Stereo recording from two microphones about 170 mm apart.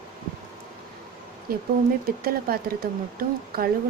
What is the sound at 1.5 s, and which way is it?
Speech, 60° right (ahead or behind).